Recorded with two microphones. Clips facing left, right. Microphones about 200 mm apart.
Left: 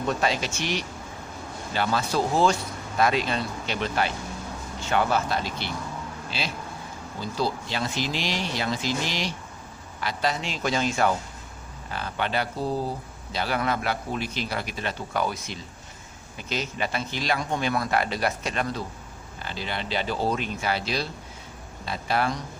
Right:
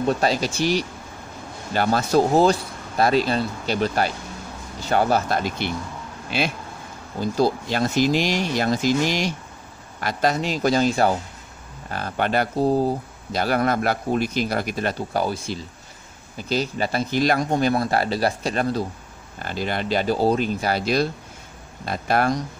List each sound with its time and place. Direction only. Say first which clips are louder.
0.0 s speech: right 5 dB; 35° right (ahead or behind)
7.2 s a man's voice: right 7 dB; 50° right (ahead or behind)
11.9 s a man's voice: right 5 dB; 45° right (ahead or behind)
19.4 s a man's voice: right 7 dB; 50° right (ahead or behind)